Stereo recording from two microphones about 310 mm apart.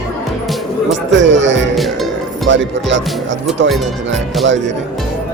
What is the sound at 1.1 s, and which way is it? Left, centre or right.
Speech, right.